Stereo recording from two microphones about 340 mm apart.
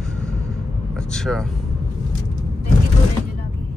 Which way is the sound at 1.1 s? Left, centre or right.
Centre.